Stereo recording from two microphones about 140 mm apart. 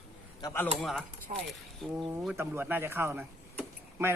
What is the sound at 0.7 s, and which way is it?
Speech, centre (ahead or behind).